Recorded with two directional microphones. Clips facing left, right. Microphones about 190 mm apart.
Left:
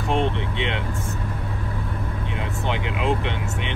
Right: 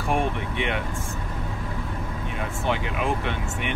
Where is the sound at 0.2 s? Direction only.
20° left (ahead or behind).